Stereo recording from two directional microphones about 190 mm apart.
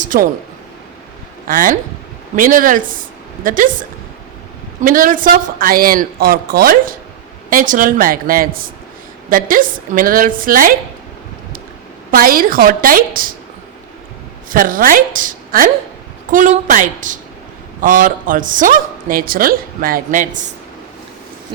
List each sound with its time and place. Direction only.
0.0 s a sound: 45° right (ahead or behind)
1.5 s a woman's voice: 45° right (ahead or behind)
4.8 s a woman's voice: 45° right (ahead or behind)
12.1 s a woman's voice: 50° right (ahead or behind)
14.5 s a woman's voice: 45° right (ahead or behind)